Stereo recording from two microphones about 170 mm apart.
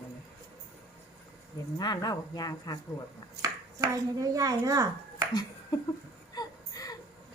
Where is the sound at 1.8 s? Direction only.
25° left (ahead or behind).